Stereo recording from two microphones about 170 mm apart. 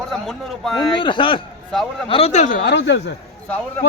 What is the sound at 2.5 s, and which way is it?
Speech, 85° left.